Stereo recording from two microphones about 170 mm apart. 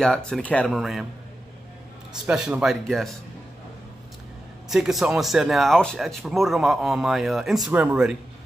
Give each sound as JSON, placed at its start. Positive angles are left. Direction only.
{"t": 0.0, "sound": "speech", "side_deg": 5}
{"t": 2.2, "sound": "speech", "side_deg": -5}
{"t": 4.6, "sound": "speech", "side_deg": 0}